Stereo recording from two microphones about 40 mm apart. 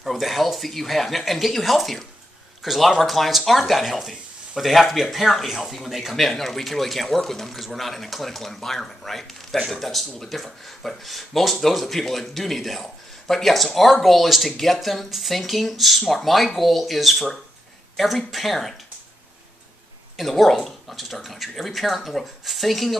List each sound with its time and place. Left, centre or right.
0.0 s speech: centre
20.2 s speech: centre